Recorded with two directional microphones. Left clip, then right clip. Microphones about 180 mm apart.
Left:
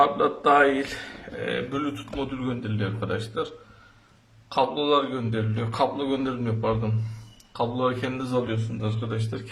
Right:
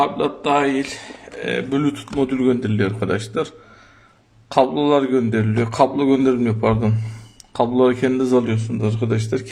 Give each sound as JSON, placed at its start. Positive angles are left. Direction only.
{"t": 0.0, "sound": "speech", "side_deg": -15}
{"t": 1.7, "sound": "a man's voice", "side_deg": -40}